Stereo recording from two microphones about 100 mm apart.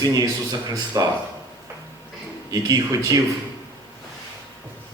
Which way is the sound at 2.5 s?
35° right (ahead or behind).